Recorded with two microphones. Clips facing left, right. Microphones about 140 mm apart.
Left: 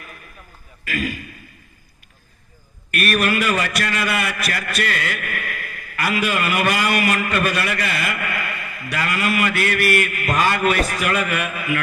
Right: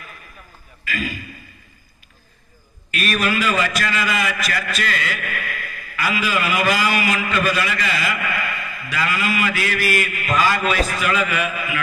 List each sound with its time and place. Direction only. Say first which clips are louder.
0.9 s a man's voice: left 2 dB; 60° left (ahead or behind)
2.9 s a man's voice: left 2 dB; 60° left (ahead or behind)